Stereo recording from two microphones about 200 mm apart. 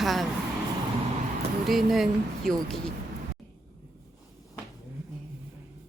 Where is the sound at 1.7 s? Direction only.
Centre (ahead or behind).